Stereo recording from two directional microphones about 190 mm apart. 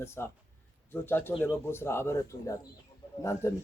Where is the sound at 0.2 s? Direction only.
10° left (ahead or behind).